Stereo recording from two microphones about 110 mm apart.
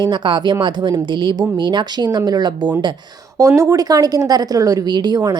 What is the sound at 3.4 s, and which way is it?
A woman's voice, 30° right (ahead or behind).